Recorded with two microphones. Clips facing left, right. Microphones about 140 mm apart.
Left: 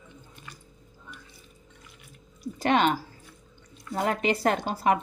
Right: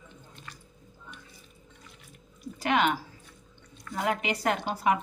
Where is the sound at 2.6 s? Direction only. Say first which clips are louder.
Left 3 dB; 35° left (ahead or behind).